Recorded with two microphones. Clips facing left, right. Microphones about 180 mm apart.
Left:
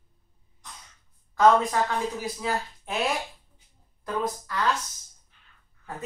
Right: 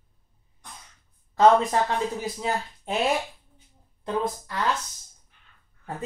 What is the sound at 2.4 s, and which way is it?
Speech, 25° right (ahead or behind).